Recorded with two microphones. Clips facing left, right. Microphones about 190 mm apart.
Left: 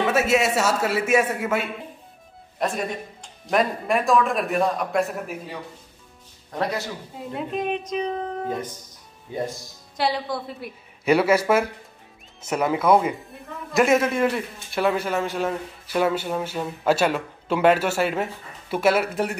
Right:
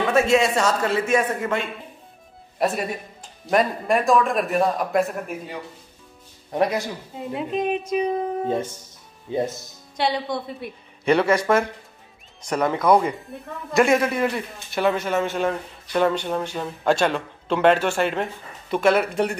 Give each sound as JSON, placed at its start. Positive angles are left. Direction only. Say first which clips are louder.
{"t": 0.1, "sound": "speech", "louder": "right 6 dB", "side_deg": 5}
{"t": 2.6, "sound": "speech", "louder": "right 2 dB", "side_deg": -5}
{"t": 6.5, "sound": "speech", "louder": "right 5 dB", "side_deg": -20}
{"t": 7.2, "sound": "a woman's voice", "louder": "right 3 dB", "side_deg": 0}
{"t": 8.5, "sound": "speech", "louder": "right 4 dB", "side_deg": -25}
{"t": 9.9, "sound": "speech", "louder": "right 1 dB", "side_deg": 0}